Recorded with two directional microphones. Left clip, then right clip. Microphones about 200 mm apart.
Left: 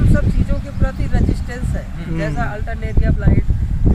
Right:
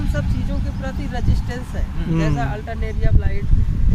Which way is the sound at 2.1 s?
20° right (ahead or behind).